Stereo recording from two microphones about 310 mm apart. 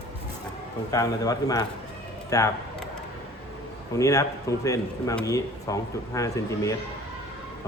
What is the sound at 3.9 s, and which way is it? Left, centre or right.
Speech, centre.